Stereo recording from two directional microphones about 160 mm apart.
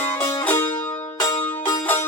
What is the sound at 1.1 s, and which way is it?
Music, 25° left (ahead or behind).